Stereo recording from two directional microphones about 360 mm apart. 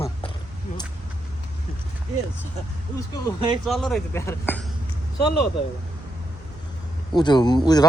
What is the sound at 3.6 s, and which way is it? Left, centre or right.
Speech, centre.